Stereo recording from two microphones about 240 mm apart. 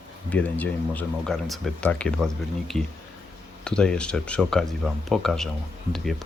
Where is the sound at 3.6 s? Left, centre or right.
Centre.